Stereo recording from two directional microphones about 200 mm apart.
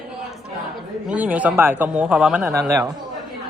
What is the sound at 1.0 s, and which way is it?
Speech, 5° right (ahead or behind).